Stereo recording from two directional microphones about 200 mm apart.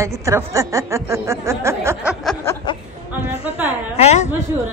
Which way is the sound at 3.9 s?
35° left (ahead or behind).